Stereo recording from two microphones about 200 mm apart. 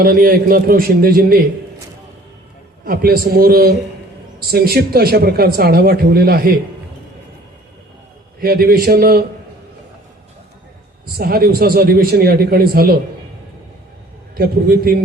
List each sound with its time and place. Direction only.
0.0 s speech: 45° right (ahead or behind)
2.8 s speech: 50° right (ahead or behind)
8.4 s speech: 50° right (ahead or behind)
11.2 s speech: 50° right (ahead or behind)
14.3 s speech: 50° right (ahead or behind)